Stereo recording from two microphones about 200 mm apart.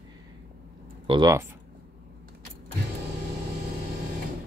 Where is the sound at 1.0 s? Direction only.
20° right (ahead or behind).